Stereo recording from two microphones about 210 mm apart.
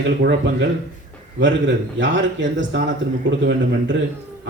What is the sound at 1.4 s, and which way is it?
Speech, 60° right (ahead or behind).